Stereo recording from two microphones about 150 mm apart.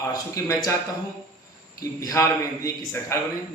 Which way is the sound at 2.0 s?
20° left (ahead or behind).